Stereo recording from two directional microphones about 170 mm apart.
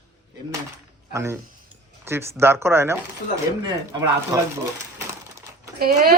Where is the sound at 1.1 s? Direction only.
15° right (ahead or behind).